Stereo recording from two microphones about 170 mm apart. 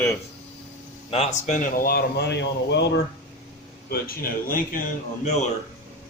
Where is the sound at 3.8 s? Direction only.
60° left (ahead or behind).